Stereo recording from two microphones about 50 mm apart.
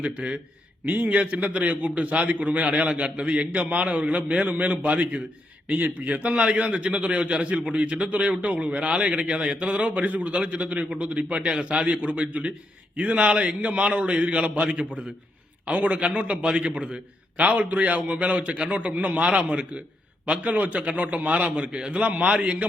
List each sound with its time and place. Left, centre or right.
0.0 s a man's voice: right